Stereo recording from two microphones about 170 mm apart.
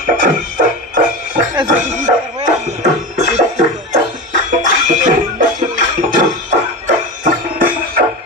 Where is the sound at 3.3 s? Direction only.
45° right (ahead or behind).